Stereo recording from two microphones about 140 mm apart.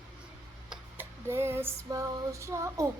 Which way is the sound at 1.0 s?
15° right (ahead or behind).